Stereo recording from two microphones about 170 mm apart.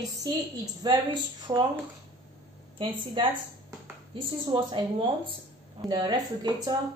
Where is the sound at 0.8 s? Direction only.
25° right (ahead or behind).